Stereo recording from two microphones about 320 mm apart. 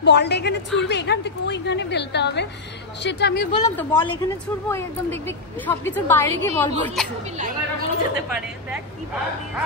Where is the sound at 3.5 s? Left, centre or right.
Centre.